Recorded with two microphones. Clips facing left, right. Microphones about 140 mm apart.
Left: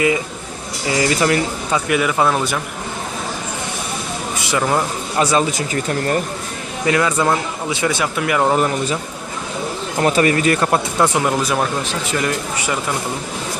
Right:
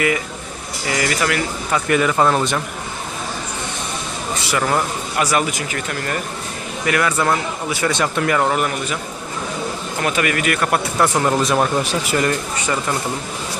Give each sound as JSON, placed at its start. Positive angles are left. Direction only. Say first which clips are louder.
{"t": 0.9, "sound": "speech", "louder": "left 4 dB", "side_deg": 25}
{"t": 1.9, "sound": "speech", "louder": "right 2 dB", "side_deg": 5}
{"t": 4.4, "sound": "speech", "louder": "left 1 dB", "side_deg": 15}
{"t": 6.8, "sound": "speech", "louder": "left 2 dB", "side_deg": 25}
{"t": 7.9, "sound": "speech", "louder": "even", "side_deg": 5}
{"t": 8.5, "sound": "speech", "louder": "left 3 dB", "side_deg": 30}
{"t": 10.0, "sound": "speech", "louder": "left 5 dB", "side_deg": 35}
{"t": 10.9, "sound": "speech", "louder": "even", "side_deg": 15}